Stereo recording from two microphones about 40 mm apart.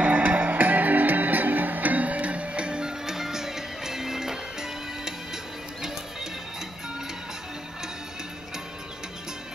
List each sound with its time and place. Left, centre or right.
0.0 s music: right; by 5.9 s centre